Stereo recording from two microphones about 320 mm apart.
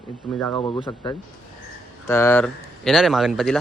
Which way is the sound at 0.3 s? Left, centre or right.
Centre.